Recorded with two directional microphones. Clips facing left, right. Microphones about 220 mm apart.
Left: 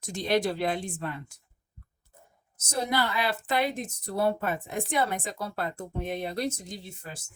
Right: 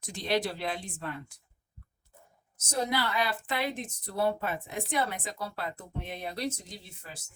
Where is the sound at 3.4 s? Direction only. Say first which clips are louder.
Left 5 dB; 45° left (ahead or behind).